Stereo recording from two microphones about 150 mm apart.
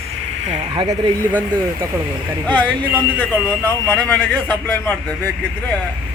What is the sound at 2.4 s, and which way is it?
Speech, 10° left (ahead or behind).